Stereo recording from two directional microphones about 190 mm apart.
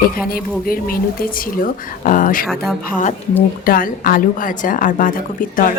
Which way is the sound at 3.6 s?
50° left (ahead or behind).